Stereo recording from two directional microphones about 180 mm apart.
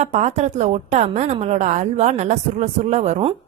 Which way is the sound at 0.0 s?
40° right (ahead or behind).